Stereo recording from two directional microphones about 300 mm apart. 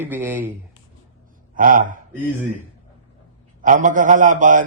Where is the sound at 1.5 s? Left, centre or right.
Right.